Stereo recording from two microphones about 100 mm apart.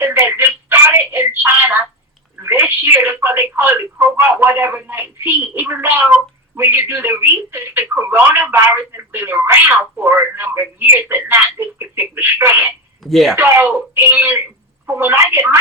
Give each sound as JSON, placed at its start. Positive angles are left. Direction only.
{"t": 0.0, "sound": "telephone", "side_deg": -20}
{"t": 2.4, "sound": "a sound", "side_deg": -20}
{"t": 3.5, "sound": "speech", "side_deg": -20}
{"t": 13.1, "sound": "speech", "side_deg": 0}
{"t": 13.3, "sound": "speech", "side_deg": -20}